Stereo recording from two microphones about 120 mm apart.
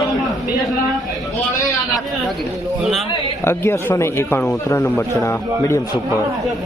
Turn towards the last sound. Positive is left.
turn(degrees=20)  # may be behind; listen again after turning